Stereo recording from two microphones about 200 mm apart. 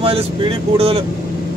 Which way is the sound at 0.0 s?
30° right (ahead or behind).